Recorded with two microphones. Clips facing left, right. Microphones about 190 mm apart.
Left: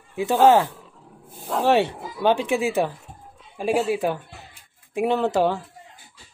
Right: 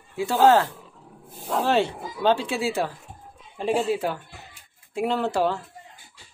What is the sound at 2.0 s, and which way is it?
Speech, centre (ahead or behind).